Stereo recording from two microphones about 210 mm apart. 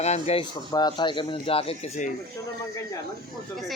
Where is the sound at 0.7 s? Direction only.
20° left (ahead or behind).